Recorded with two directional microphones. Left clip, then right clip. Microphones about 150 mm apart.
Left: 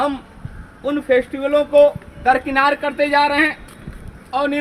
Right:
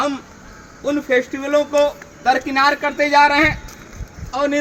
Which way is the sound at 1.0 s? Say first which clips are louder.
Left 4 dB; 20° left (ahead or behind).